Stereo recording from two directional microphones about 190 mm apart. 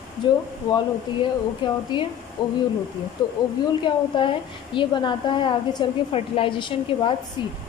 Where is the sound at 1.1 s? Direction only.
25° left (ahead or behind).